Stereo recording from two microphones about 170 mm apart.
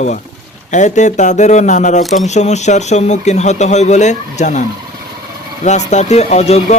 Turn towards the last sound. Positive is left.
turn(degrees=40)  # may be behind; listen again after turning